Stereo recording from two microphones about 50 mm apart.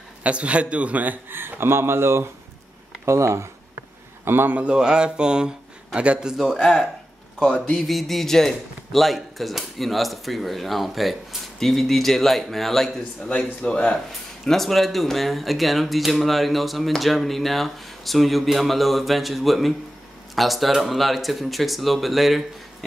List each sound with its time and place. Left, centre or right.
0.2 s a man's voice: right
1.3 s speech: right
3.1 s speech: right
4.2 s a man's voice: right
4.5 s a sound: right
5.9 s a man's voice: right
6.3 s a sound: centre
7.5 s a sound: centre
7.9 s speech: centre
13.6 s speech: left
14.4 s speech: centre